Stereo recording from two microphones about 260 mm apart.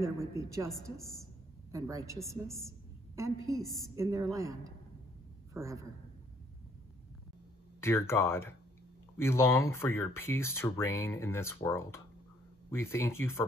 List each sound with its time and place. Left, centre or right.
0.0 s speech: centre
1.7 s a man's voice: centre
7.8 s speech: centre